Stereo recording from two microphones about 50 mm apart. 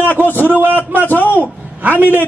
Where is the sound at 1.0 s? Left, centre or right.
Left.